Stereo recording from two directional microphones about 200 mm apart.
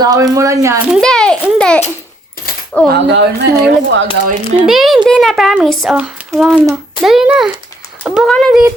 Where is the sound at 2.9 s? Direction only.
60° right (ahead or behind).